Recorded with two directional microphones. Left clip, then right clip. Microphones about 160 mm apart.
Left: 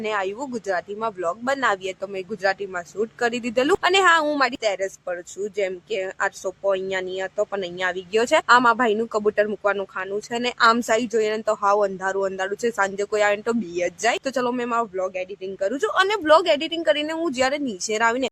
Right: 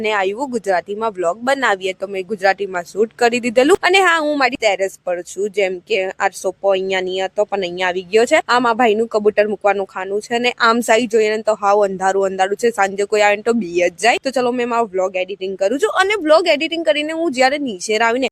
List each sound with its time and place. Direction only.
0.0 s speech: 50° right (ahead or behind)